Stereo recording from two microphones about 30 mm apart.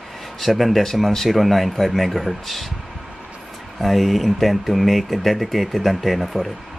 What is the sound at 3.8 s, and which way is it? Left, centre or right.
Speech, centre.